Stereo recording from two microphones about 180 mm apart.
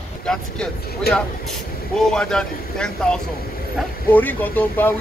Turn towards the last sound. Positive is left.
turn(degrees=10)  # may be behind; listen again after turning